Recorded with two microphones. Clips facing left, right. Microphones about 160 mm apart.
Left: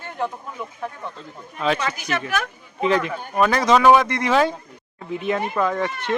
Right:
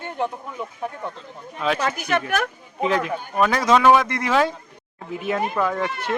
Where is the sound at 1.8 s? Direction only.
50° right (ahead or behind).